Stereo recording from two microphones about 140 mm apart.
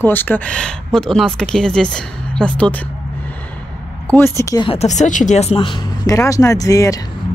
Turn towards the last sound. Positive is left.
turn(degrees=25)  # may be behind; listen again after turning